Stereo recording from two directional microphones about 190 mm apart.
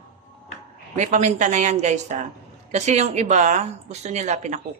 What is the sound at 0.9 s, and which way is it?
A woman's voice, 40° right (ahead or behind).